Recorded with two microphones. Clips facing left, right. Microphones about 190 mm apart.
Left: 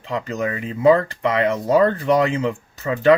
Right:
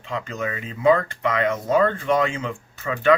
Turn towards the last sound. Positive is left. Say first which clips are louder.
# left 4 dB
turn(degrees=35)  # may be behind; listen again after turning